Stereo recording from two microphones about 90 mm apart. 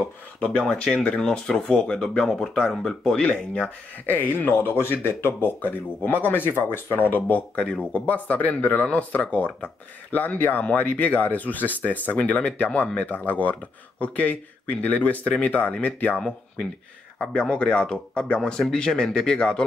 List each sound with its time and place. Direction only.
0.4 s speech: 10° left (ahead or behind)
4.0 s speech: 20° left (ahead or behind)